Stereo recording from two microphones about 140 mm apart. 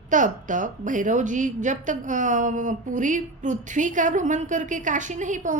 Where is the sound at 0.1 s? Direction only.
65° right (ahead or behind).